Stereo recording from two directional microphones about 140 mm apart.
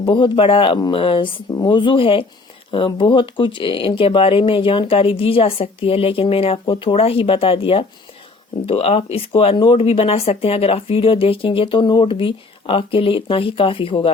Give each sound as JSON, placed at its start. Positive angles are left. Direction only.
{"t": 0.0, "sound": "speech", "side_deg": 35}
{"t": 1.5, "sound": "speech", "side_deg": 25}